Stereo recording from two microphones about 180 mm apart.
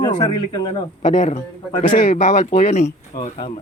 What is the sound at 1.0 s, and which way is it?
Speech, 40° left (ahead or behind).